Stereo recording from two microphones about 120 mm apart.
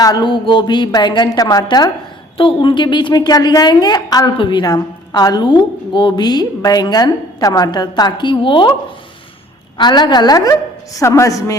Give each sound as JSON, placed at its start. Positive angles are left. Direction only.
{"t": 0.0, "sound": "a woman's voice", "side_deg": 35}
{"t": 2.4, "sound": "a woman's voice", "side_deg": 45}
{"t": 9.7, "sound": "a woman's voice", "side_deg": 35}